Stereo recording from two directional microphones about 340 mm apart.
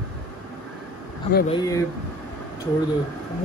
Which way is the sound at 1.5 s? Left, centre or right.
Centre.